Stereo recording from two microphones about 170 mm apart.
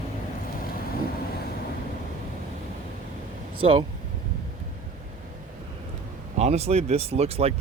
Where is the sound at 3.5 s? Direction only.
35° right (ahead or behind).